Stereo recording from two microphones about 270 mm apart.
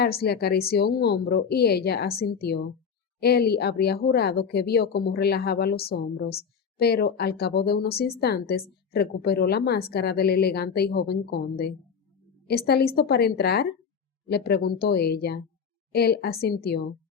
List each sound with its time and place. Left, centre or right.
0.0 s speech: left